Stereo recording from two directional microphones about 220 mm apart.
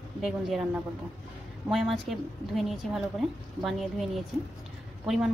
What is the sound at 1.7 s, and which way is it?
A woman's voice, centre (ahead or behind).